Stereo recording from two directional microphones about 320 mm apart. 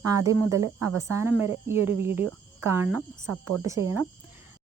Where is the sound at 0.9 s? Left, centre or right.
Right.